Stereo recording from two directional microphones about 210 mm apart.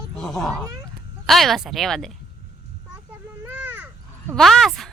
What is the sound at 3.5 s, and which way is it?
Caw, 10° right (ahead or behind).